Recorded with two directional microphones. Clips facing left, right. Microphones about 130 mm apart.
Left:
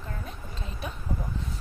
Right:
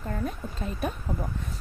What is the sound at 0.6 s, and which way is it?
Speech, 50° right (ahead or behind).